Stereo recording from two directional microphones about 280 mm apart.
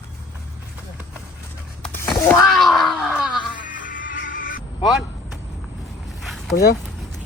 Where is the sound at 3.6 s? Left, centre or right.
Left.